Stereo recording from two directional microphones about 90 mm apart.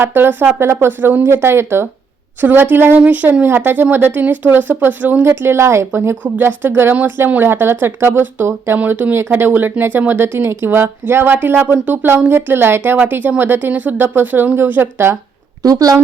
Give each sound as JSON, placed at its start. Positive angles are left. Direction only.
{"t": 0.0, "sound": "speech", "side_deg": -25}
{"t": 15.6, "sound": "speech", "side_deg": -40}